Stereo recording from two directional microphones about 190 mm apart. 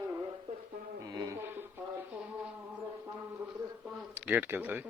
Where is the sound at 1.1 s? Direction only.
20° right (ahead or behind).